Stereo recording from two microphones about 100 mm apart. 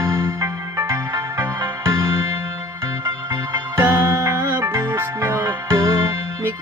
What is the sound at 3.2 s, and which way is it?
Music, 30° right (ahead or behind).